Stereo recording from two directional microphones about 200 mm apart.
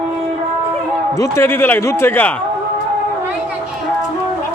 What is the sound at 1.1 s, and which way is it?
A man's voice, 10° left (ahead or behind).